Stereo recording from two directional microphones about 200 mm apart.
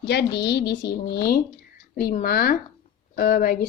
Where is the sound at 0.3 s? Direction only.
55° left (ahead or behind).